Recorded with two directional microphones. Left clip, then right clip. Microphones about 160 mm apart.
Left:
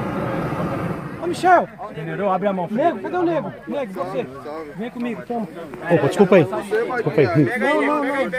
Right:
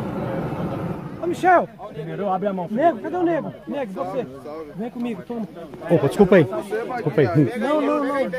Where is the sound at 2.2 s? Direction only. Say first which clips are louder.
Left 3 dB; 45° left (ahead or behind).